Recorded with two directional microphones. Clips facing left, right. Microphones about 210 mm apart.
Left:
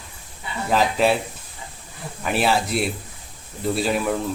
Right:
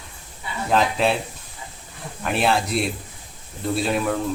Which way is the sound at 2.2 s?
Centre (ahead or behind).